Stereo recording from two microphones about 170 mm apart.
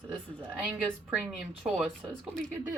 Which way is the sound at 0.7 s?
5° right (ahead or behind).